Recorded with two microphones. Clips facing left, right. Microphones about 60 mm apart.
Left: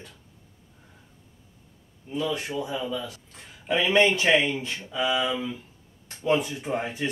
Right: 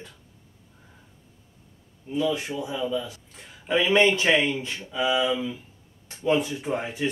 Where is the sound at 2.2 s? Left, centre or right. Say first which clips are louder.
Even; centre.